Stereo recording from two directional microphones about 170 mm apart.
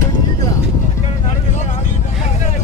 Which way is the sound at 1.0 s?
40° left (ahead or behind).